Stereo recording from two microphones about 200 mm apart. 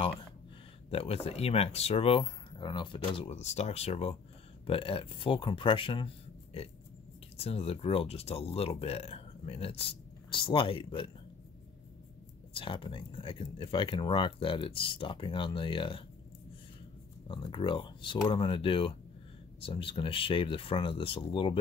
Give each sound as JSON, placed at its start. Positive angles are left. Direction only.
{"t": 0.8, "sound": "speech", "side_deg": 30}
{"t": 12.5, "sound": "speech", "side_deg": 25}
{"t": 17.3, "sound": "speech", "side_deg": 25}